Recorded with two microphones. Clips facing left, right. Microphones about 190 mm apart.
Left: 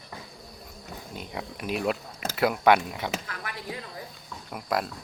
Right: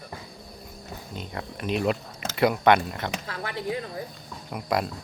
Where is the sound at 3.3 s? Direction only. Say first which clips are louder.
Right 7 dB; 30° right (ahead or behind).